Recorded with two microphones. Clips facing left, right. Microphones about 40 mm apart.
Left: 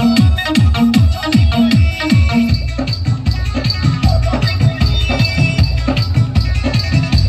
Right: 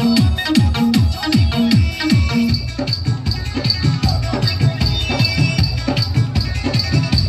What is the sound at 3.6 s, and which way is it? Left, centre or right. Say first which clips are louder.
Music: left 2 dB; left.